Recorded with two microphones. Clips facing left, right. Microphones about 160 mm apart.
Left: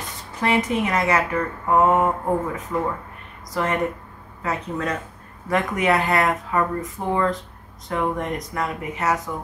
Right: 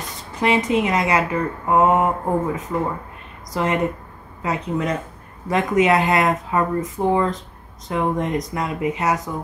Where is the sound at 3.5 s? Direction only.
20° right (ahead or behind).